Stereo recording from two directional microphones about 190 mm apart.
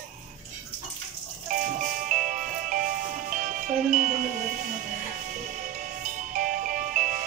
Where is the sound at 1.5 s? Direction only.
45° right (ahead or behind).